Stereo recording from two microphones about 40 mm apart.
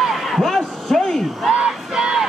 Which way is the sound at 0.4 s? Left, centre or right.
Centre.